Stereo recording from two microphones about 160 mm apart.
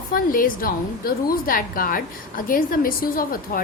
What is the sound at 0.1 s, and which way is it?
A woman's voice, 60° left (ahead or behind).